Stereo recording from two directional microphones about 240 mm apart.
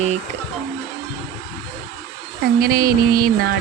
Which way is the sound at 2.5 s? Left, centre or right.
Right.